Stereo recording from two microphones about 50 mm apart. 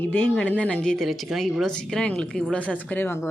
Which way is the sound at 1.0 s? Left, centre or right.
Centre.